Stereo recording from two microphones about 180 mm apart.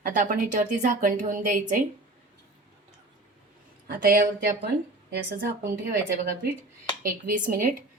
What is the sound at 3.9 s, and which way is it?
Speech, 55° right (ahead or behind).